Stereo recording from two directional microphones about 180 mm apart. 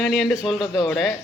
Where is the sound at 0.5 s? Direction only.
25° left (ahead or behind).